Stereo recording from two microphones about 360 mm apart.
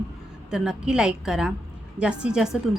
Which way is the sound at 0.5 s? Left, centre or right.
Centre.